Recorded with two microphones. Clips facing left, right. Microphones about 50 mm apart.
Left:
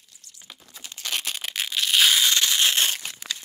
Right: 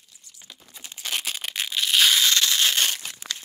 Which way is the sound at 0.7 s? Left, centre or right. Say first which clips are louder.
Even; centre.